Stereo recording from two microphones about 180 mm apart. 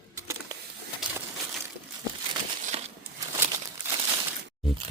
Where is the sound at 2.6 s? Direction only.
40° right (ahead or behind).